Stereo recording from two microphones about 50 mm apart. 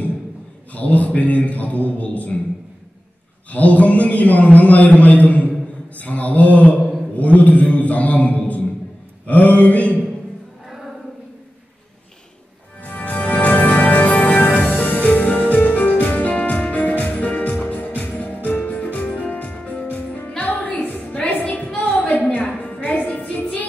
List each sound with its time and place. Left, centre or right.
0.7 s a man's voice: left
3.5 s a man's voice: left
9.2 s a sound: left
12.8 s music: left
21.7 s a sound: left
22.6 s music: left